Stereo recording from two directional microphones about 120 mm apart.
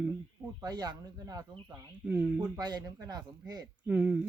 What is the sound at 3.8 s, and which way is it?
Speech, 10° right (ahead or behind).